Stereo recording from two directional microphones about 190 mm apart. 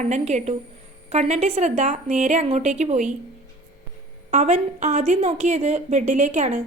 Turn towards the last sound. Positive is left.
turn(degrees=-40)  # may be behind; listen again after turning